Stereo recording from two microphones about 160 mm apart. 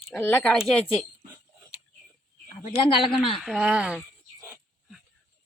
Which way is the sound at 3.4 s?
5° right (ahead or behind).